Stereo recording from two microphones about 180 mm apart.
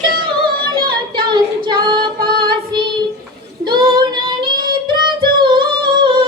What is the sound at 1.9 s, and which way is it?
Female singing, 55° right (ahead or behind).